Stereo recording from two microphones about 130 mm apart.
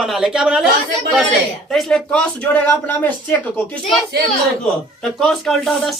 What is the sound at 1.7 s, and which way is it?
Speech, 5° left (ahead or behind).